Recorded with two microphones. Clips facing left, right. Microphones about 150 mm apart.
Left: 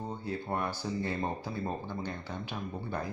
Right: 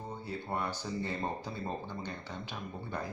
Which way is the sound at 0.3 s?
15° left (ahead or behind).